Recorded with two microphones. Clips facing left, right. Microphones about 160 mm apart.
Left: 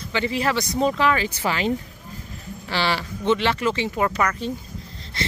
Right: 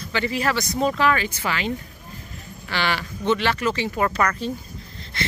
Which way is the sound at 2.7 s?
30° left (ahead or behind).